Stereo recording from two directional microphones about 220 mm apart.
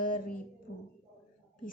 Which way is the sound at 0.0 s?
40° left (ahead or behind).